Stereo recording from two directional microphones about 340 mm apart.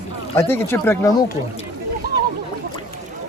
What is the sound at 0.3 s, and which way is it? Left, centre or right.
Speech, centre.